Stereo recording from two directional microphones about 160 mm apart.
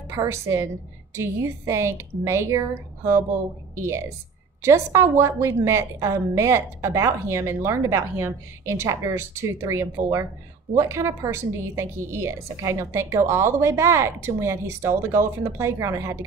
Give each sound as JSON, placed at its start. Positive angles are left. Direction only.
{"t": 0.1, "sound": "a woman's voice", "side_deg": -20}
{"t": 4.6, "sound": "a woman's voice", "side_deg": -15}